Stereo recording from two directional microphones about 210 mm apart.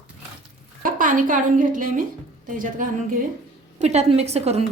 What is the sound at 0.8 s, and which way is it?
A woman's voice, 40° right (ahead or behind).